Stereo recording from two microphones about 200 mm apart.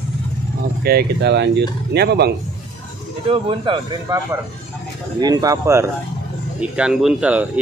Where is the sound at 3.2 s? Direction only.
25° right (ahead or behind).